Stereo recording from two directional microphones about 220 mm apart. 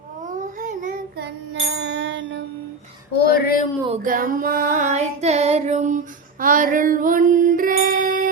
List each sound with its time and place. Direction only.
0.3 s child singing: 35° right (ahead or behind)
1.5 s music: 50° right (ahead or behind)
3.2 s speech: 45° left (ahead or behind)
3.8 s female singing: 35° right (ahead or behind)